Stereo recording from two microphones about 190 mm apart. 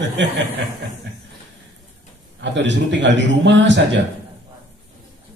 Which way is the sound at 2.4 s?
70° right (ahead or behind).